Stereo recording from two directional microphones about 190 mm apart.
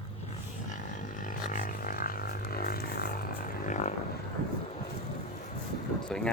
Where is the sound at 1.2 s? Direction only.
45° left (ahead or behind).